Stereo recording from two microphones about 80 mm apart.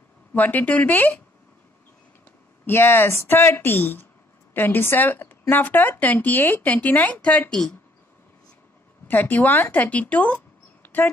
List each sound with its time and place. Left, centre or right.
0.3 s speech: left
2.6 s speech: left; by 7.7 s centre
9.0 s speech: left